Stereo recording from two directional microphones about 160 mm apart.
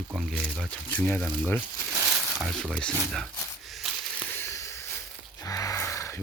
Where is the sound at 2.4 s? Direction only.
Centre (ahead or behind).